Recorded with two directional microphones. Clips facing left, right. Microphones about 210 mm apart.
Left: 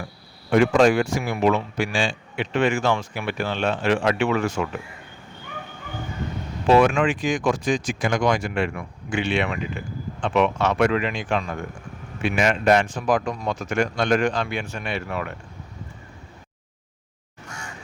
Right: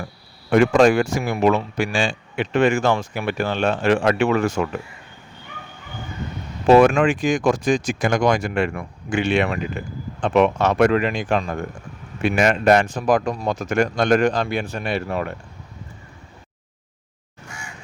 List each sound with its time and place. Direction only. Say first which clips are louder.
0.5 s speech: right 2 dB; 45° right (ahead or behind)
6.7 s speech: right 4 dB; 45° right (ahead or behind)